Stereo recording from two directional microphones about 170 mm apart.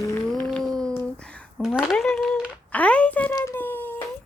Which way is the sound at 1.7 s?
Centre (ahead or behind).